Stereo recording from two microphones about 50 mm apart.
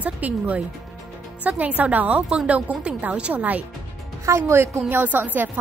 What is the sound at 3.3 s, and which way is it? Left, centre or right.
Speech, right.